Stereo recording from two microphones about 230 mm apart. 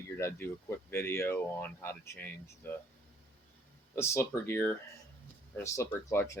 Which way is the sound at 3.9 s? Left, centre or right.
Centre.